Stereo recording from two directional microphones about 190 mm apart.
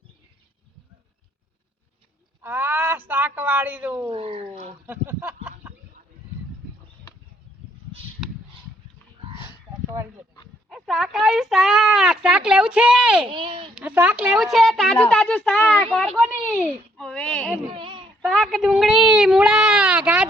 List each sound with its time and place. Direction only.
2.4 s speech: 10° right (ahead or behind)
4.1 s speech: 30° right (ahead or behind)
4.9 s a sound: 10° right (ahead or behind)
9.3 s a sound: 25° left (ahead or behind)
10.7 s speech: centre (ahead or behind)
13.3 s speech: 25° right (ahead or behind)
13.7 s speech: 5° right (ahead or behind)
17.7 s baby cry: 25° right (ahead or behind)
18.2 s speech: centre (ahead or behind)